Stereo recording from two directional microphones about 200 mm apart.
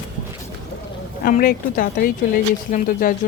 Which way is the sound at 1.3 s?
45° left (ahead or behind).